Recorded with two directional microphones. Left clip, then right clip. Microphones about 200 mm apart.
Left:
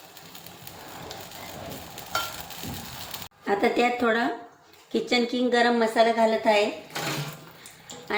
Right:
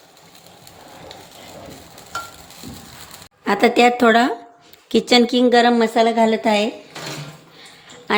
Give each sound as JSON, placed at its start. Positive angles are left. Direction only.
{"t": 3.4, "sound": "a woman's voice", "side_deg": -55}